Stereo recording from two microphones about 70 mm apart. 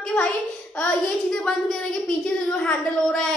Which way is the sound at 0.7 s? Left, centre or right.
Centre.